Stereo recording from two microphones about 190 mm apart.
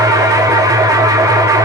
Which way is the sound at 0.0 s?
20° right (ahead or behind).